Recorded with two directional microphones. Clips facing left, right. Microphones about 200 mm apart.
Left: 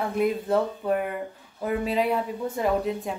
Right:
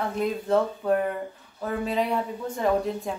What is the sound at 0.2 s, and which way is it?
A woman's voice, 5° left (ahead or behind).